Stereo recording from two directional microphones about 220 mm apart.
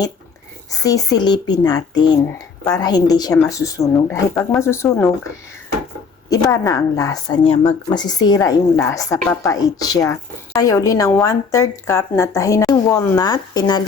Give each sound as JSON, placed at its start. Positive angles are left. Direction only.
{"t": 0.7, "sound": "a woman's voice", "side_deg": 15}
{"t": 6.3, "sound": "a woman's voice", "side_deg": 15}